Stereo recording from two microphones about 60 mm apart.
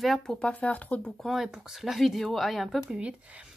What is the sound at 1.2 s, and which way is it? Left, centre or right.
Speech, centre.